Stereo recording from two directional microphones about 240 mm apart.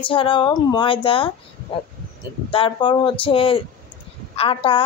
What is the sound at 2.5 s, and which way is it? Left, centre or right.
A woman's voice, left.